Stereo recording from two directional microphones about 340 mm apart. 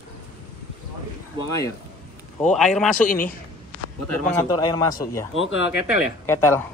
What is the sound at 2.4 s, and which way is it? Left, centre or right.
Speech, centre.